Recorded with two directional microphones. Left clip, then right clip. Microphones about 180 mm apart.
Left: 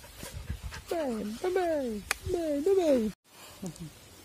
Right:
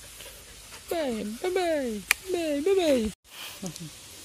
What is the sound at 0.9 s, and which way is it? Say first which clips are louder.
Speech: right 3 dB; 5° right (ahead or behind).